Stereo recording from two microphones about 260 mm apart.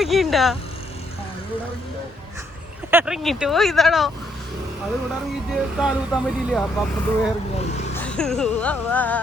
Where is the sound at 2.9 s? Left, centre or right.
Centre.